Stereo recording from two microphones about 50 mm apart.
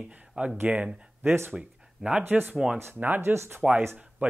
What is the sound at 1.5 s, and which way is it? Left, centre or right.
Speech, right.